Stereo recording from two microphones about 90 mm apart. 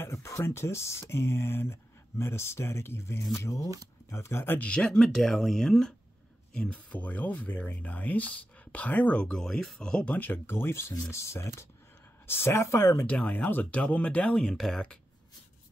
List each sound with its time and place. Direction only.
0.0 s speech: 30° left (ahead or behind)
4.6 s speech: 10° left (ahead or behind); by 13.0 s 30° left (ahead or behind)
13.0 s speech: 15° left (ahead or behind)